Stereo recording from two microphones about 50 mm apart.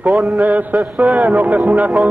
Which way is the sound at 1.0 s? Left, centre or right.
Right.